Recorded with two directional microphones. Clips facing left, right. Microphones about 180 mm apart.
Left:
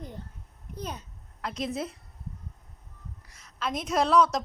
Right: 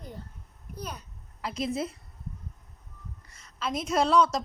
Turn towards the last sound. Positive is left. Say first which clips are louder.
# even
turn(degrees=0)  # may be behind; listen again after turning